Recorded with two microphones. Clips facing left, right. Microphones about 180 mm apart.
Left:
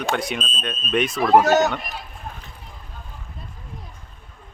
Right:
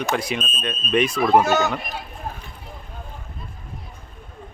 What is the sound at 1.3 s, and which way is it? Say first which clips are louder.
Speech: left 4 dB; 40° left (ahead or behind).